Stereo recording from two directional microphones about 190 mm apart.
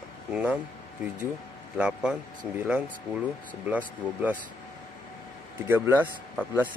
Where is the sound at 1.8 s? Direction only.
5° right (ahead or behind).